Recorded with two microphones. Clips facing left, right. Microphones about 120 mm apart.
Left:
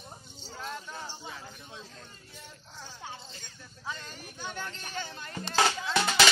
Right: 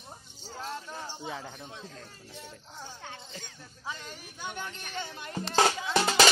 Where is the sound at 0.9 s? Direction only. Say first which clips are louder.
Right 2 dB; 15° right (ahead or behind).